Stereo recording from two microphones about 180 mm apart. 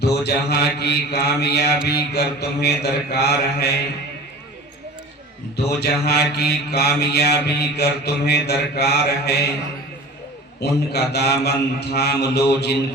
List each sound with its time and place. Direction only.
0.0 s mantra: 65° left (ahead or behind)
5.6 s mantra: 65° left (ahead or behind)
10.6 s mantra: 65° left (ahead or behind)